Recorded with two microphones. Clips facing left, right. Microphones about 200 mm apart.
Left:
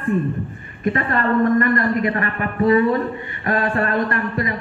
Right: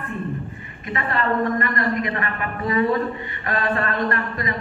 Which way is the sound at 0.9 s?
50° left (ahead or behind).